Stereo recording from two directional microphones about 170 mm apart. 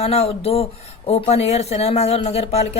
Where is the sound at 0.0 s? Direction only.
35° left (ahead or behind).